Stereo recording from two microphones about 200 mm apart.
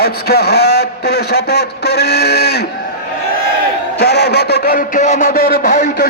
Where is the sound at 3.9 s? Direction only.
55° left (ahead or behind).